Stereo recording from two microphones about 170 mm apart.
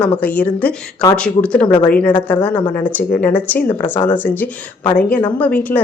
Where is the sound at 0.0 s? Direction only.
10° left (ahead or behind).